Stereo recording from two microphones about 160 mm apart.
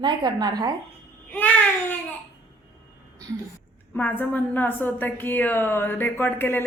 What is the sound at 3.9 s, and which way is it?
A woman's voice, 10° left (ahead or behind).